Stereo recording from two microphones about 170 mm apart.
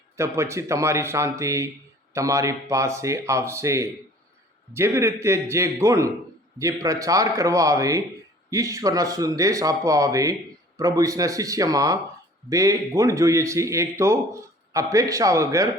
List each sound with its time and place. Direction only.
0.2 s a man's voice: 15° right (ahead or behind)